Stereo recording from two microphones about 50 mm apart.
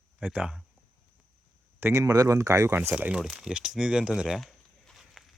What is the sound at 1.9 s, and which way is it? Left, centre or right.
Speech, right.